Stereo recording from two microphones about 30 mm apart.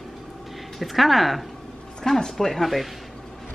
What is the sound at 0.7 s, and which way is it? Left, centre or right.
Speech, centre.